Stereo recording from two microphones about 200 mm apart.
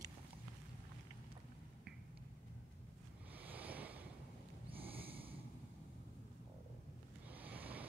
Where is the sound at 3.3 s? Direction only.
10° right (ahead or behind).